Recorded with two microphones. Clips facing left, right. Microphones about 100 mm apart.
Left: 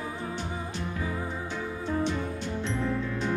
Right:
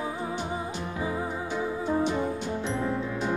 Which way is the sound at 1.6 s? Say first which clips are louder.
Right 4 dB; 15° right (ahead or behind).